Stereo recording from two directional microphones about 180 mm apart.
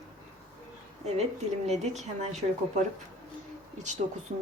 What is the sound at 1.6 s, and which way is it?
A woman's voice, 40° right (ahead or behind).